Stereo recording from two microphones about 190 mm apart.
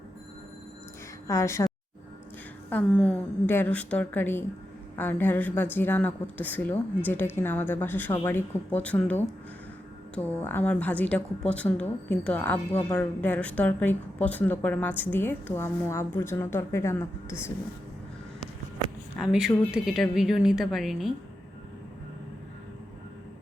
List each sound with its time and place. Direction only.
1.3 s speech: 15° left (ahead or behind)
10.4 s speech: 10° left (ahead or behind)
19.2 s a woman's voice: centre (ahead or behind)